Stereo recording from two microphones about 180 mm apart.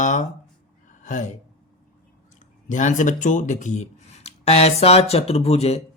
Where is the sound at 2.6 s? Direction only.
45° left (ahead or behind).